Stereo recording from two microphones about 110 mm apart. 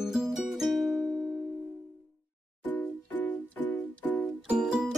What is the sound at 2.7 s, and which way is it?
Music, 15° left (ahead or behind).